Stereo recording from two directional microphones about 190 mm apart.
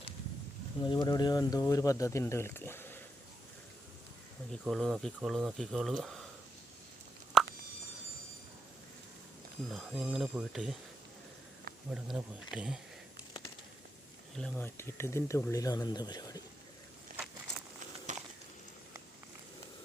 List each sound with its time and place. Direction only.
0.8 s speech: 20° left (ahead or behind)
4.6 s speech: centre (ahead or behind)
7.4 s a sound: centre (ahead or behind)
9.6 s speech: 5° right (ahead or behind)
11.9 s speech: 5° right (ahead or behind)
14.3 s speech: 5° left (ahead or behind)
18.1 s a sound: 40° right (ahead or behind)